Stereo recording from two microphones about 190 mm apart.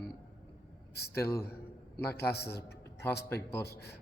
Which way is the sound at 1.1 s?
15° left (ahead or behind).